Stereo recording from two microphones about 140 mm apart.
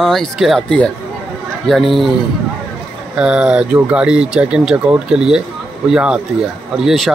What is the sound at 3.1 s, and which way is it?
Speech, 5° right (ahead or behind).